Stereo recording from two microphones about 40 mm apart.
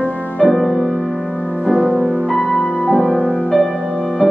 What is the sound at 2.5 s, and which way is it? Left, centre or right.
Music, left.